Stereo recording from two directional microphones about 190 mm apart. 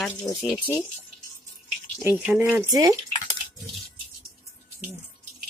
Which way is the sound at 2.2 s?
10° right (ahead or behind).